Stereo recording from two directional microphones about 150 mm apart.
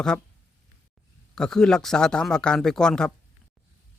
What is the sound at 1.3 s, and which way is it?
Speech, 5° left (ahead or behind).